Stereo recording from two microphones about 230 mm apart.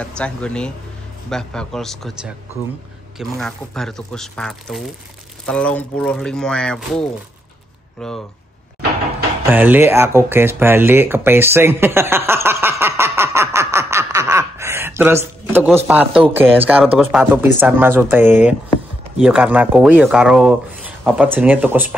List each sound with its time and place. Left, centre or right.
0.0 s speech: centre
9.5 s speech: centre